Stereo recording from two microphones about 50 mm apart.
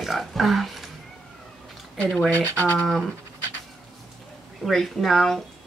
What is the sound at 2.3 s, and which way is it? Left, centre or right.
Speech, left.